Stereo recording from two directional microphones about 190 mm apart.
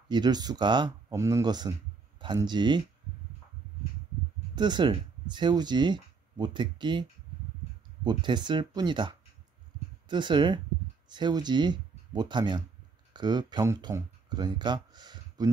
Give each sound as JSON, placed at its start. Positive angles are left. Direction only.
{"t": 0.1, "sound": "speech", "side_deg": -20}
{"t": 4.6, "sound": "speech", "side_deg": -25}